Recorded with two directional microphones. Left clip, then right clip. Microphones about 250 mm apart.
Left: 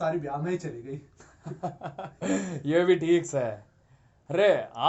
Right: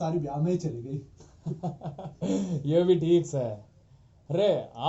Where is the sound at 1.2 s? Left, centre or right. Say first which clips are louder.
Left 2 dB; left.